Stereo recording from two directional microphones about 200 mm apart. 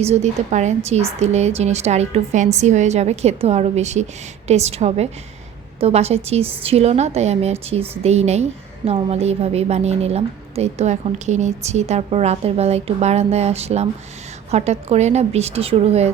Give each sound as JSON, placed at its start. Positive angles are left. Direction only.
{"t": 0.0, "sound": "a woman's voice", "side_deg": -35}